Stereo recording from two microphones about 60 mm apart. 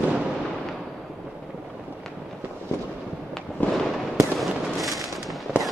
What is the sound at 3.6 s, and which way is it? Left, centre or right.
Fireworks, left.